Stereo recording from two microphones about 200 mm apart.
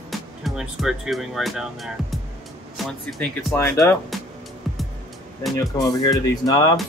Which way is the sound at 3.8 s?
Centre (ahead or behind).